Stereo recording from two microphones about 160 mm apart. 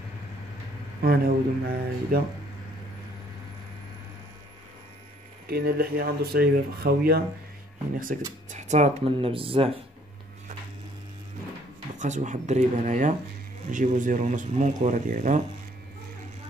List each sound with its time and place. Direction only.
1.0 s speech: 70° right (ahead or behind)
5.5 s speech: 75° right (ahead or behind)
8.5 s speech: 45° right (ahead or behind)
11.9 s speech: 50° right (ahead or behind)